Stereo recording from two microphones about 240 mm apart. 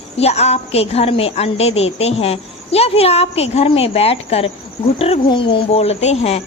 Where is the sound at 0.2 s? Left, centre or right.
Left.